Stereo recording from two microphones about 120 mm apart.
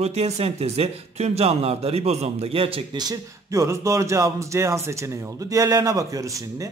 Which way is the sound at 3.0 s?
30° right (ahead or behind).